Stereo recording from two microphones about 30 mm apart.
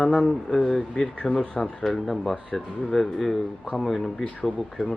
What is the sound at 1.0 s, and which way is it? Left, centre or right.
Speech, left.